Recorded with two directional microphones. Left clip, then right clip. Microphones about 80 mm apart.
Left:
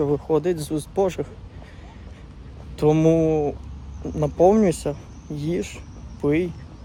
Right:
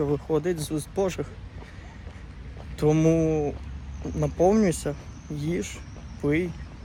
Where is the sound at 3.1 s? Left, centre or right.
Left.